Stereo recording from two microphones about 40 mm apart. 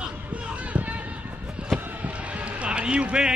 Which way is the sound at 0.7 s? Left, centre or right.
Right.